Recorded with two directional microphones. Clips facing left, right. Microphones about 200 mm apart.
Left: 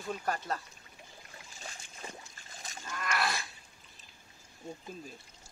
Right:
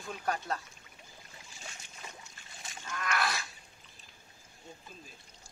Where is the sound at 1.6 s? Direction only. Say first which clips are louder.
Left 2 dB; 35° left (ahead or behind).